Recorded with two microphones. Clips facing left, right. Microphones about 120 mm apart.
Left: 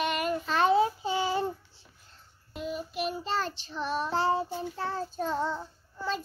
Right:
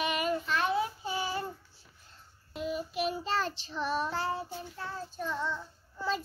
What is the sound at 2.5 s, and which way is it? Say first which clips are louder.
Child singing: even; centre (ahead or behind).